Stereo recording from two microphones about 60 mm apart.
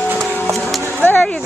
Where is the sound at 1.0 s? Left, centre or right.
Left.